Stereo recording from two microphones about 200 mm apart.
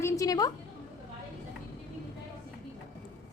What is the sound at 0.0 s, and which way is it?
Speech, 15° left (ahead or behind).